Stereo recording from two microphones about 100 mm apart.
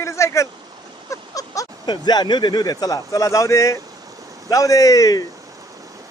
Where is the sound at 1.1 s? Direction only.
35° left (ahead or behind).